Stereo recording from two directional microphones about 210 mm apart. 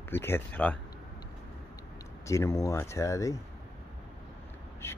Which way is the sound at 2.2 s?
15° left (ahead or behind).